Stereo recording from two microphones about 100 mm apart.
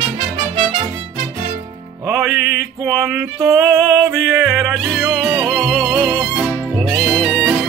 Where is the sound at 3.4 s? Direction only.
30° right (ahead or behind).